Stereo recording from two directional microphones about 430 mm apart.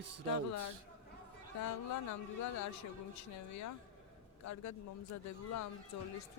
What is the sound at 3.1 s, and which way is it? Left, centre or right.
Speech, left.